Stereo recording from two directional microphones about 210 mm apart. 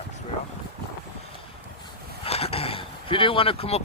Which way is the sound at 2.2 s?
30° left (ahead or behind).